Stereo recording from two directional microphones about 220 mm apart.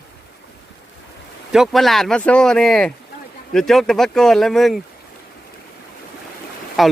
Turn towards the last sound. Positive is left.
turn(degrees=0)  # may be behind; listen again after turning